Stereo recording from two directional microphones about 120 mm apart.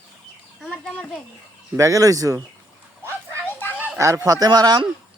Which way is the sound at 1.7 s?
25° right (ahead or behind).